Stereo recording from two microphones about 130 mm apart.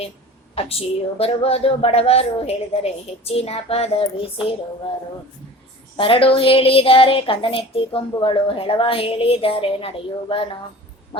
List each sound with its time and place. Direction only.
0.5 s speech: 50° left (ahead or behind)
6.0 s speech: 45° left (ahead or behind)
11.1 s a sound: 45° left (ahead or behind)